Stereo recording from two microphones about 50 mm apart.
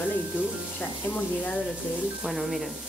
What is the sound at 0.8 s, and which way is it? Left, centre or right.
Speech, left.